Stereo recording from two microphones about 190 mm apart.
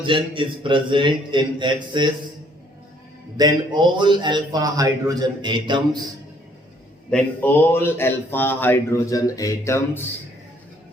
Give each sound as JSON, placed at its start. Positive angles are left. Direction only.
{"t": 0.0, "sound": "a man's voice", "side_deg": -25}
{"t": 3.3, "sound": "a man's voice", "side_deg": -25}
{"t": 7.1, "sound": "speech", "side_deg": 10}